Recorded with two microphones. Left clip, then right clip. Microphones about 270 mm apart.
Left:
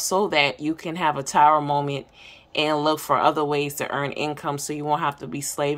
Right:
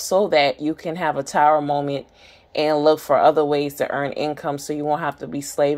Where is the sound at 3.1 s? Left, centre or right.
Left.